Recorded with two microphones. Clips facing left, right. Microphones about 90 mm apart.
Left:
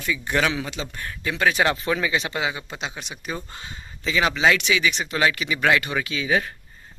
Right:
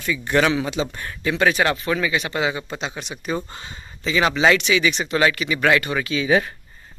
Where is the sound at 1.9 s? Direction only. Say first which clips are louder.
Right 1 dB; 20° left (ahead or behind).